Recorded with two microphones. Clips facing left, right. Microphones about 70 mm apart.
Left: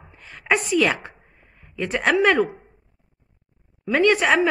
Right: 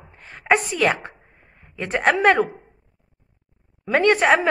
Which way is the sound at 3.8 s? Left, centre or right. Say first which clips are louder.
Right 1 dB; right.